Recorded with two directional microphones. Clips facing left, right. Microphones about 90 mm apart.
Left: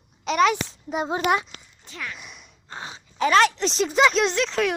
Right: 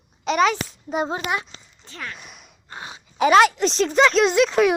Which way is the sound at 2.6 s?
25° left (ahead or behind).